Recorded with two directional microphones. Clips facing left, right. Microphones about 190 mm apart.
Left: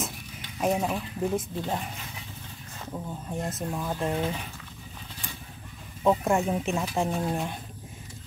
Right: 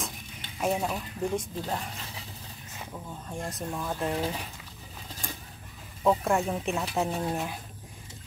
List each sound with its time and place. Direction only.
0.7 s speech: centre (ahead or behind)
2.9 s speech: 20° left (ahead or behind)
3.4 s speech: 5° left (ahead or behind)
6.0 s speech: centre (ahead or behind)